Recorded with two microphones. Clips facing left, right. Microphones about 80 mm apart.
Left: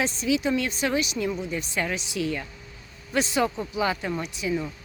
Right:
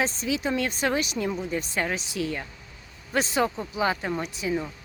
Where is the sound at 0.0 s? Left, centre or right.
Right.